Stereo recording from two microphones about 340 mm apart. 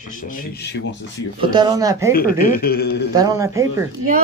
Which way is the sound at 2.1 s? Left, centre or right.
Left.